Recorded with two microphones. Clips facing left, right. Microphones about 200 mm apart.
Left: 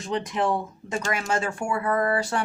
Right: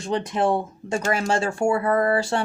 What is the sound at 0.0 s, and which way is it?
Speech, 30° right (ahead or behind).